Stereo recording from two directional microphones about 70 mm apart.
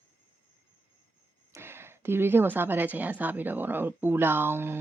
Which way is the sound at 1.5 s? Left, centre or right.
Right.